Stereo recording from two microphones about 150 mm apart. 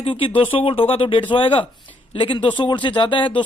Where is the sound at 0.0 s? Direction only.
35° left (ahead or behind).